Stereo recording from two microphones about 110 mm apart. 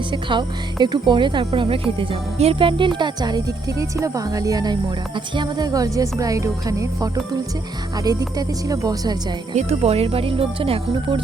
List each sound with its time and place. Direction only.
0.1 s speech: 45° right (ahead or behind)
1.6 s speech: 60° right (ahead or behind)
3.0 s speech: 40° right (ahead or behind)
9.6 s speech: 70° right (ahead or behind)